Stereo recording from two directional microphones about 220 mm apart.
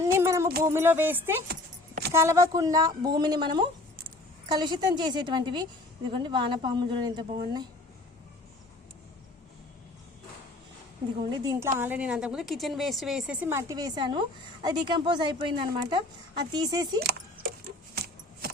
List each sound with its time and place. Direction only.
0.0 s a sound: 15° right (ahead or behind)
0.6 s a woman's voice: 10° right (ahead or behind)
11.2 s a woman's voice: 15° right (ahead or behind)
11.8 s a woman's voice: 5° right (ahead or behind)
17.9 s keys jangling: 45° right (ahead or behind)